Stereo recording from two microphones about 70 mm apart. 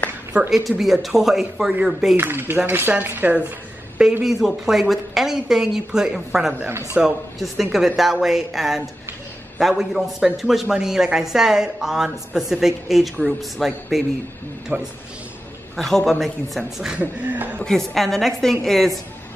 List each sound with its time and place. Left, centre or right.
0.3 s speech: centre
0.7 s a woman's voice: centre
2.1 s speech: right
4.2 s a woman's voice: centre
14.7 s speech: right
15.7 s a man's voice: centre
17.0 s speech: right
17.6 s a woman's voice: centre